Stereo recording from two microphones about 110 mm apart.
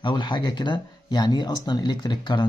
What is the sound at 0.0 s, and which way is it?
Speech, 45° left (ahead or behind).